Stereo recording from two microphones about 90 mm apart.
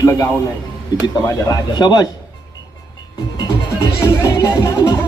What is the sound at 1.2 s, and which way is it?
Speech, 40° left (ahead or behind).